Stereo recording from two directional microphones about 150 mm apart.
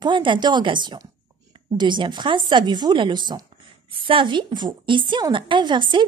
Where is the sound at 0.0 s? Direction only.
30° right (ahead or behind).